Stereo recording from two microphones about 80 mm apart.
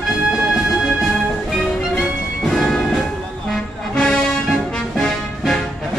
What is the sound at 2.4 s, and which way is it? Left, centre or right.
Music, centre.